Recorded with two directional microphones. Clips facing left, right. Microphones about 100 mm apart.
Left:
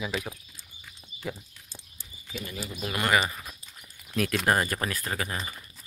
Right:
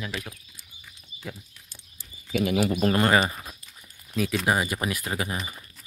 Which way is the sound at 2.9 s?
35° right (ahead or behind).